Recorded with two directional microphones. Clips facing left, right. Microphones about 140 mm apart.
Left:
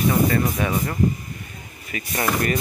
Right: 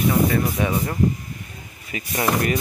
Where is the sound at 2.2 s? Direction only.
15° right (ahead or behind).